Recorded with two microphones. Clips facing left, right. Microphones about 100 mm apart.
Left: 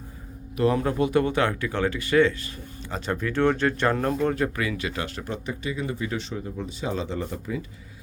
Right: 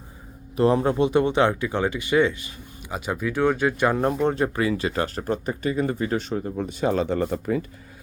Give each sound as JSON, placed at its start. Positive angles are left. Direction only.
{"t": 0.5, "sound": "speech", "side_deg": -30}